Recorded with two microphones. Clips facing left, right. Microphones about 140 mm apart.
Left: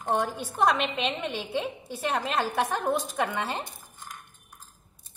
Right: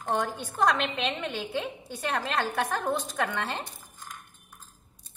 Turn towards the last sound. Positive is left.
turn(degrees=10)  # may be behind; listen again after turning